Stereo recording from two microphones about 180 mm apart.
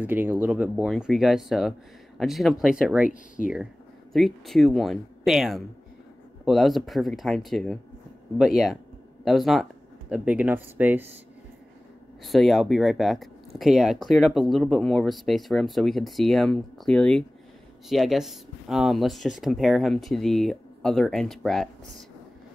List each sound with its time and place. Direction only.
0.0 s speech: 10° right (ahead or behind)
3.1 s speech: 45° left (ahead or behind)
4.1 s speech: centre (ahead or behind)
12.2 s speech: centre (ahead or behind)